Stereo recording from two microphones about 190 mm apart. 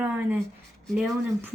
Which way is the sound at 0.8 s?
Centre (ahead or behind).